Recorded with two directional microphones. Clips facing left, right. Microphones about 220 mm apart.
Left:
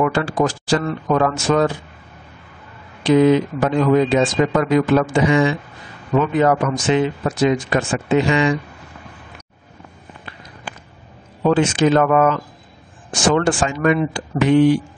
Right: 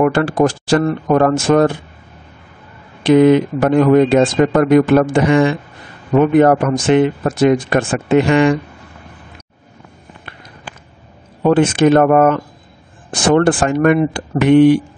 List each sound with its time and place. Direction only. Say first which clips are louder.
0.0 s speech: right 5 dB; 55° right (ahead or behind)
3.0 s speech: right 4 dB; 60° right (ahead or behind)
11.4 s speech: right 4 dB; 55° right (ahead or behind)